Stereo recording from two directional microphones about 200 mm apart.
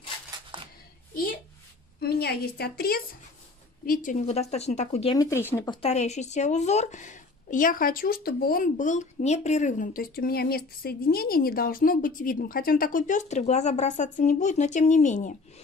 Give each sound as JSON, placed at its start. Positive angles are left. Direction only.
{"t": 1.1, "sound": "a sound", "side_deg": 45}
{"t": 2.0, "sound": "a woman's voice", "side_deg": 50}
{"t": 5.1, "sound": "speech", "side_deg": 15}
{"t": 5.7, "sound": "speech", "side_deg": 30}